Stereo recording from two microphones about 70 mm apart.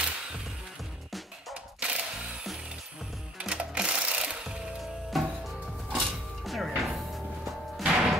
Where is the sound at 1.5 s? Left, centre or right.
Centre.